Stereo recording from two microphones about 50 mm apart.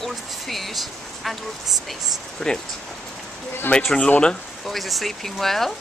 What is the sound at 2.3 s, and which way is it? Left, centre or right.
Speech, centre.